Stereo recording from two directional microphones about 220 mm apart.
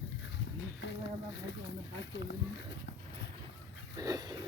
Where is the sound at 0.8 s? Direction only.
50° left (ahead or behind).